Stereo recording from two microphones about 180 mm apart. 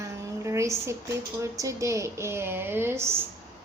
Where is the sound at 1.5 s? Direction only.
15° right (ahead or behind).